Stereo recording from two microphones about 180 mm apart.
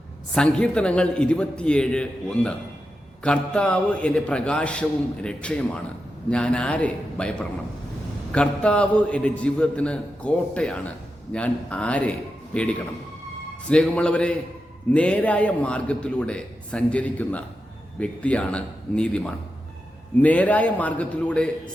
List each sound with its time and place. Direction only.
0.3 s a man's voice: 5° left (ahead or behind)